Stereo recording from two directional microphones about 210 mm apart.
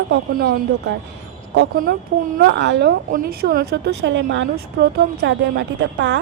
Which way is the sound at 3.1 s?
45° right (ahead or behind).